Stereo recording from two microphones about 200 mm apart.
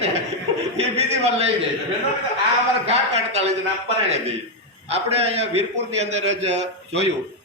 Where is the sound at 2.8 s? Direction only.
30° right (ahead or behind).